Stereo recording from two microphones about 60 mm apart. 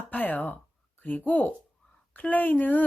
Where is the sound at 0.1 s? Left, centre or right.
Left.